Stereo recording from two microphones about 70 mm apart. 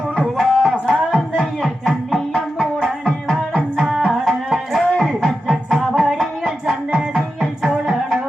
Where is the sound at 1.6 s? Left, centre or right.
Centre.